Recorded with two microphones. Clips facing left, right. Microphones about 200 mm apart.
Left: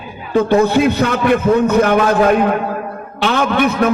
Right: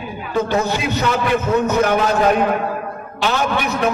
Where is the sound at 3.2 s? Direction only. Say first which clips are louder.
Left 5 dB; 55° left (ahead or behind).